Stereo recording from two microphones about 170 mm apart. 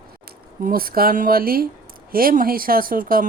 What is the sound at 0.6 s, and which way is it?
Speech, 60° right (ahead or behind).